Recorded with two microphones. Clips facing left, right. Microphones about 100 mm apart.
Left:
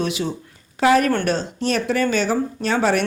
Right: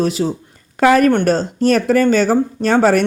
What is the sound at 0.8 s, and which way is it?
Speech, 50° right (ahead or behind).